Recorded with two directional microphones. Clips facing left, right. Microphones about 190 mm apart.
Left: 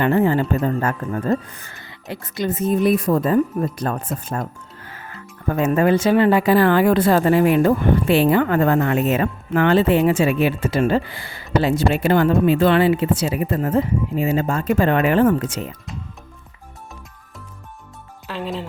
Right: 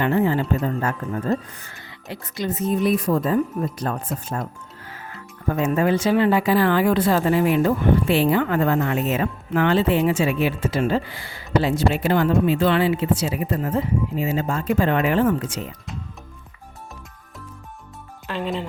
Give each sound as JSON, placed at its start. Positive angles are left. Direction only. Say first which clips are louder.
{"t": 0.0, "sound": "speech", "louder": "left 3 dB", "side_deg": 50}
{"t": 5.5, "sound": "speech", "louder": "left 3 dB", "side_deg": 60}
{"t": 18.3, "sound": "speech", "louder": "right 1 dB", "side_deg": 0}